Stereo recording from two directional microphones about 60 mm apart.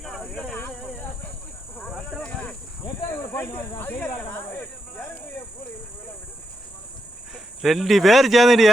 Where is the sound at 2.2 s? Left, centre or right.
Left.